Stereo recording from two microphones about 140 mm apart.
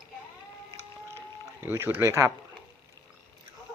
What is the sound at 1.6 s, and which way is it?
Speech, 15° right (ahead or behind).